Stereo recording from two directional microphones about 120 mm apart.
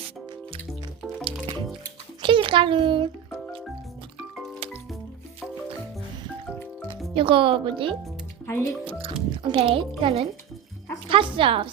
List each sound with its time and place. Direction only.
1.2 s music: 45° right (ahead or behind)
2.2 s a sound: 45° right (ahead or behind)
7.1 s speech: 45° right (ahead or behind)
8.4 s speech: 20° left (ahead or behind)
8.9 s speech: 50° right (ahead or behind)